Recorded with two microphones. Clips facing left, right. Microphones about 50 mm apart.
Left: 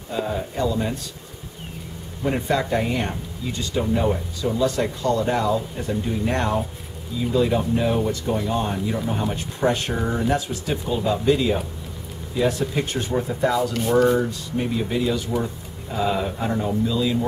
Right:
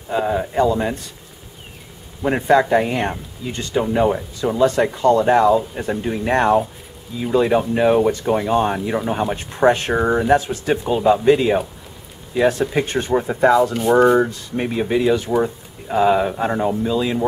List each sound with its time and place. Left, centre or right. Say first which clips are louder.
0.1 s speech: right 6 dB; right
2.2 s speech: right 7 dB; right